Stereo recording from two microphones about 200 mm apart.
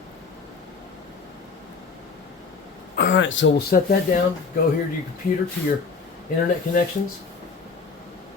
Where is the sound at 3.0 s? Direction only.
65° left (ahead or behind).